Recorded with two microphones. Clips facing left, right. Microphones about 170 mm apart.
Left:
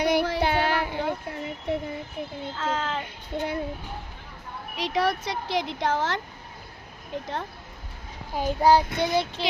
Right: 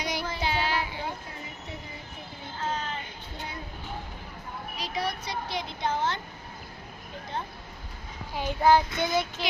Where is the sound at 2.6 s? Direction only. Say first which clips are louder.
Left 4 dB; 90° left.